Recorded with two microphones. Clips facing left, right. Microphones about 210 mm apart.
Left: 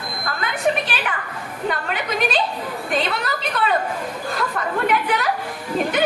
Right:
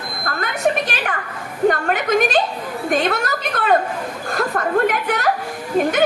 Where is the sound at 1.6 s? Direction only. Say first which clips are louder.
Right 8 dB; 45° right (ahead or behind).